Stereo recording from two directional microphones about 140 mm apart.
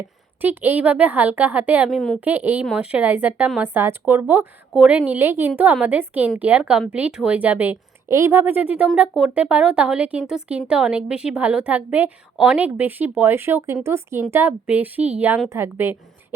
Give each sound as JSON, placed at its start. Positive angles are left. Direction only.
{"t": 0.4, "sound": "speech", "side_deg": -15}